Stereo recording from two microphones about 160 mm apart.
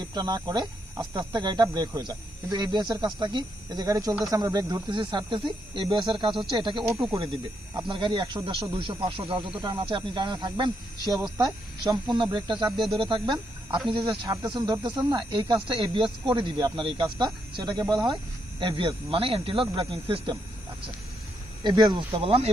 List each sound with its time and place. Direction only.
0.0 s speech: 25° right (ahead or behind)
12.7 s speech: centre (ahead or behind)
13.0 s speech: 30° right (ahead or behind)
21.6 s speech: 25° right (ahead or behind)